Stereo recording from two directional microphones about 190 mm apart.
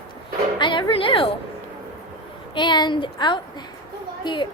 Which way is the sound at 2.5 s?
25° left (ahead or behind).